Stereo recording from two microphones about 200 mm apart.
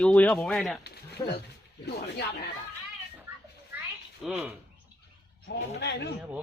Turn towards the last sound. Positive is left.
turn(degrees=60)  # may be behind; listen again after turning